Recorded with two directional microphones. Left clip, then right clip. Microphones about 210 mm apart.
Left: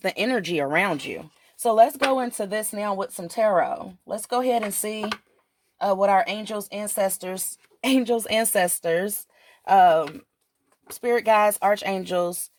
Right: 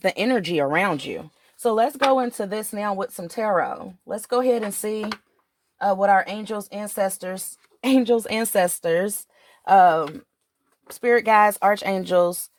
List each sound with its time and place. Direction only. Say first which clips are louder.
0.0 s speech: right 3 dB; 35° right (ahead or behind)
6.0 s speech: right 1 dB; 30° right (ahead or behind)